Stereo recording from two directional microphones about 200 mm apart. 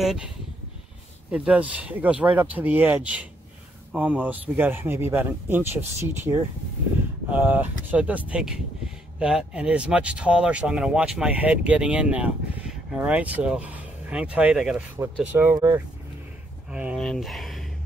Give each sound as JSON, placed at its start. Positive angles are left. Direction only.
{"t": 1.3, "sound": "speech", "side_deg": -5}
{"t": 15.0, "sound": "speech", "side_deg": -15}
{"t": 16.7, "sound": "speech", "side_deg": -5}